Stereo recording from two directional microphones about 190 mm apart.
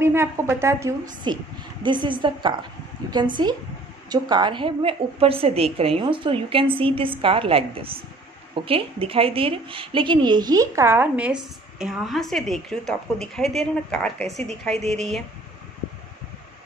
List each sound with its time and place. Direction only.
0.0 s a woman's voice: 15° right (ahead or behind)